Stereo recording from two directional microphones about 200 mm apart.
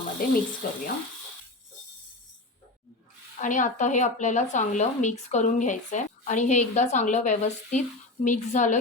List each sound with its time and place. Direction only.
0.2 s a sound: 45° left (ahead or behind)
0.6 s speech: 45° left (ahead or behind)
3.4 s speech: 40° left (ahead or behind)